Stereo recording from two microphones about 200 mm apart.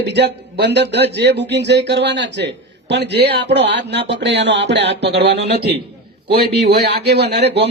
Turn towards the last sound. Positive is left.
turn(degrees=-55)  # may be behind; listen again after turning